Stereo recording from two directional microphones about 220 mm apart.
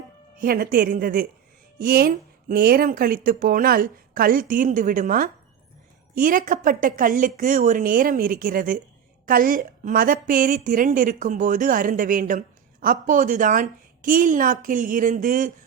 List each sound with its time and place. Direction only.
0.3 s a woman's voice: 40° right (ahead or behind)